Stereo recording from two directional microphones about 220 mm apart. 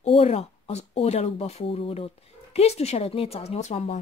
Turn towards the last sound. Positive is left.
turn(degrees=30)  # may be behind; listen again after turning